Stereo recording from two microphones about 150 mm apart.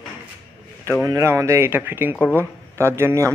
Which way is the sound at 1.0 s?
20° right (ahead or behind).